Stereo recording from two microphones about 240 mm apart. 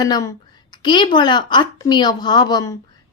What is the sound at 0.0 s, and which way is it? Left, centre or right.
A woman's voice, centre.